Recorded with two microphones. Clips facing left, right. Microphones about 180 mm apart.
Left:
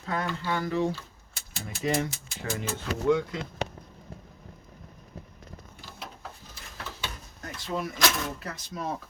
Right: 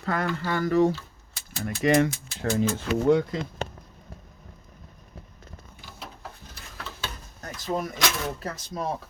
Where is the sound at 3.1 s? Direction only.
35° right (ahead or behind).